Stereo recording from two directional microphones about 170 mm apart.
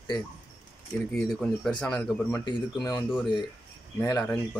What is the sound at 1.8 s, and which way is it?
Speech, 5° left (ahead or behind).